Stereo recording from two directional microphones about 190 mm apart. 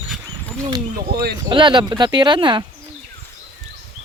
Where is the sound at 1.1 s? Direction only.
55° right (ahead or behind).